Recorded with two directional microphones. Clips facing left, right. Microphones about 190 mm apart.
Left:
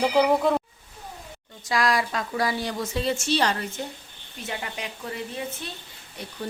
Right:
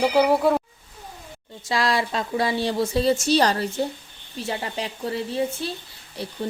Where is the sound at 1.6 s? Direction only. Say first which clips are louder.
Right 1 dB; 25° right (ahead or behind).